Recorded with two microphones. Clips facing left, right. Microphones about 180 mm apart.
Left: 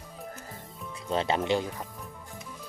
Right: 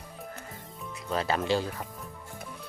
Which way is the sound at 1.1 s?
25° left (ahead or behind).